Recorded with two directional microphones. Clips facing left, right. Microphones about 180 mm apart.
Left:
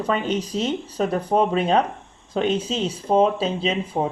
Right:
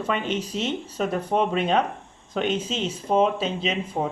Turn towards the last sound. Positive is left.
turn(degrees=35)  # may be behind; listen again after turning